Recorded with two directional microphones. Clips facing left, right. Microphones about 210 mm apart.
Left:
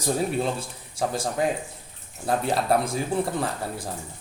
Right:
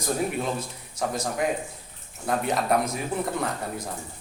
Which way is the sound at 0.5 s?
30° left (ahead or behind).